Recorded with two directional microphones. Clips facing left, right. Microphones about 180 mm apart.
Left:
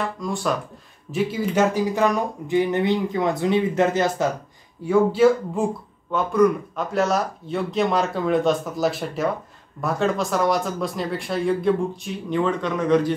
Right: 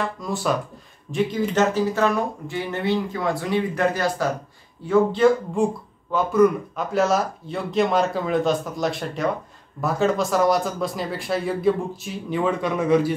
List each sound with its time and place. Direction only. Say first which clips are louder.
0.0 s speech: even; centre (ahead or behind); by 4.3 s 20° left (ahead or behind)
4.8 s speech: left 1 dB; 10° left (ahead or behind); by 13.1 s 10° right (ahead or behind)